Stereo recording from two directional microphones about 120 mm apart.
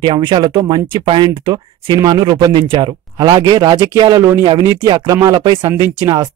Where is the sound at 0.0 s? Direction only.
40° right (ahead or behind).